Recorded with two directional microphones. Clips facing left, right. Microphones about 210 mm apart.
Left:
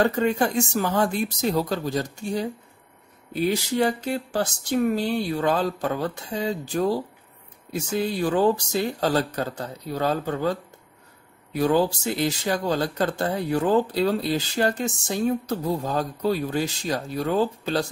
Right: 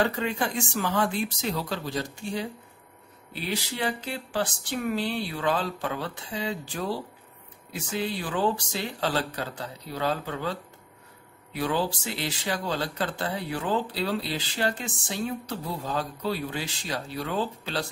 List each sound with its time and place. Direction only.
0.0 s speech: 45° left (ahead or behind)